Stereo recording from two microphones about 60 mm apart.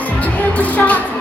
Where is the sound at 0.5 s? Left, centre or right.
Left.